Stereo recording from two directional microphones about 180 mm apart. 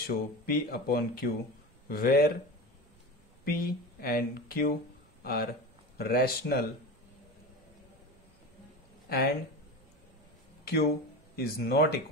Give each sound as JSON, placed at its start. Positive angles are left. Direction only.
{"t": 0.0, "sound": "speech", "side_deg": 55}
{"t": 3.4, "sound": "speech", "side_deg": 55}
{"t": 10.6, "sound": "a sound", "side_deg": 60}
{"t": 11.3, "sound": "speech", "side_deg": 60}